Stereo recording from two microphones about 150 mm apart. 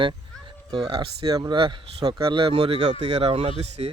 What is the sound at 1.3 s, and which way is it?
Speech, 25° right (ahead or behind).